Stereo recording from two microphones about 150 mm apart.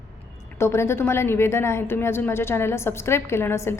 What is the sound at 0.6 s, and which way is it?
A woman's voice, 15° left (ahead or behind).